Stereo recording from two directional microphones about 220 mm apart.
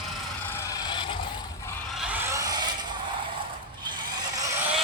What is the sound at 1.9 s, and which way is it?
Vehicle, 5° right (ahead or behind).